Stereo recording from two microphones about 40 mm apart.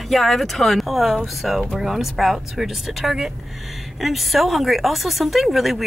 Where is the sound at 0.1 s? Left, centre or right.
Centre.